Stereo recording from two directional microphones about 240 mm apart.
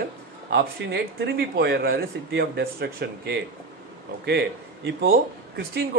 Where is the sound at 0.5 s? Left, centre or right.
Right.